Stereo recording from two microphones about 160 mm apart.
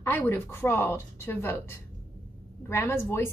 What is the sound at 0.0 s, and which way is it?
A woman's voice, 15° left (ahead or behind).